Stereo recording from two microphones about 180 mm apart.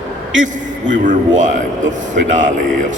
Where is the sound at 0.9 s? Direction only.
45° right (ahead or behind).